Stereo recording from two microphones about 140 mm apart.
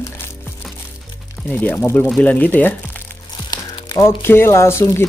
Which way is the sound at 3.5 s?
30° left (ahead or behind).